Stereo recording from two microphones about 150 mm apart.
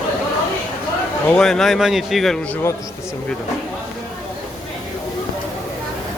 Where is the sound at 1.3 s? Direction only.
5° left (ahead or behind).